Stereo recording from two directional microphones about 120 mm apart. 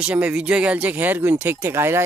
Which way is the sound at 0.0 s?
10° right (ahead or behind).